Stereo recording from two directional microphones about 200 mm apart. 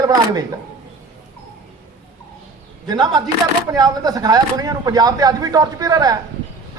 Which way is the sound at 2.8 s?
20° right (ahead or behind).